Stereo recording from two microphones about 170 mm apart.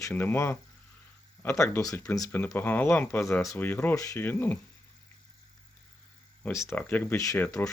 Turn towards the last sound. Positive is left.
turn(degrees=10)  # may be behind; listen again after turning